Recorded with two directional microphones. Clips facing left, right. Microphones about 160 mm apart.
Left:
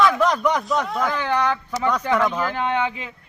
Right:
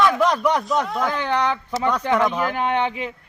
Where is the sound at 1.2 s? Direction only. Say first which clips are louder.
Even; 20° right (ahead or behind).